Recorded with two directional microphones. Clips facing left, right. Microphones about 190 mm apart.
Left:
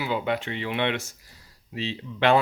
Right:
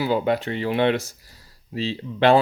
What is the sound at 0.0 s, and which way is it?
Speech, 40° right (ahead or behind).